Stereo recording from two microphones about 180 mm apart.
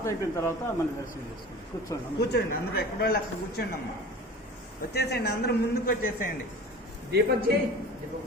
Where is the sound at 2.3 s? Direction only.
60° left (ahead or behind).